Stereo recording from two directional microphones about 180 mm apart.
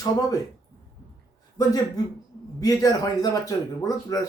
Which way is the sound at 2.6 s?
20° left (ahead or behind).